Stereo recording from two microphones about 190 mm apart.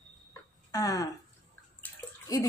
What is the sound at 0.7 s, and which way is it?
Speech, 20° left (ahead or behind).